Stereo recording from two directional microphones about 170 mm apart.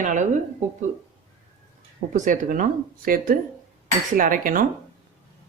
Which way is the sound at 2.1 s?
50° right (ahead or behind).